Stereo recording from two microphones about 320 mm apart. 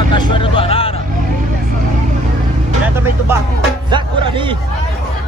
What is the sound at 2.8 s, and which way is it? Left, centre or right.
Speech, centre.